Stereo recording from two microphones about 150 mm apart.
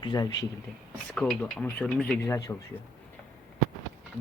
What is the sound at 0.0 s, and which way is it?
Speech, 30° left (ahead or behind).